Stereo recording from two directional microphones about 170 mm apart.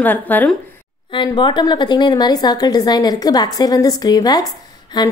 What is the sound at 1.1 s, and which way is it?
A woman's voice, 25° left (ahead or behind).